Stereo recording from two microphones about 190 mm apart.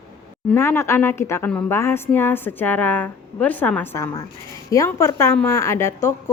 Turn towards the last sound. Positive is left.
turn(degrees=15)  # may be behind; listen again after turning